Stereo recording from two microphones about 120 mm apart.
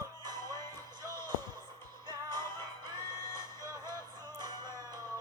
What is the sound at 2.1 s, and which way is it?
Music, 40° right (ahead or behind).